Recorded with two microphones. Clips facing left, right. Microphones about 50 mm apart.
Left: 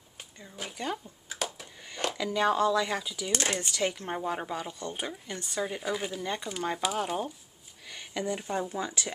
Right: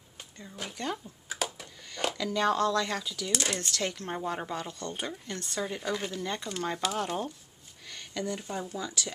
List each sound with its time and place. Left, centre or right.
0.2 s speech: centre
1.3 s a sound: centre
2.1 s speech: centre
3.3 s speech: left
3.5 s speech: centre; by 9.1 s left